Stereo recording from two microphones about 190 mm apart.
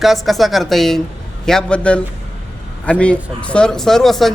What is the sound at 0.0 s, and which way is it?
A man's voice, centre (ahead or behind).